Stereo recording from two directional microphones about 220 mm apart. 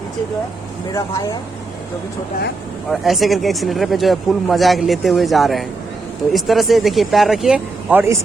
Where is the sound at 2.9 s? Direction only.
Centre (ahead or behind).